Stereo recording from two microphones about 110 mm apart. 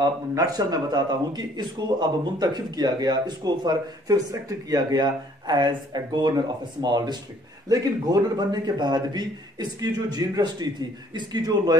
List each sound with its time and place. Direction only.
0.0 s speech: 35° right (ahead or behind)